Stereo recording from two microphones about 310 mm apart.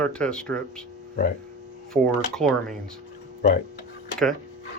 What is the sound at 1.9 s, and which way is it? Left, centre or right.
Speech, centre.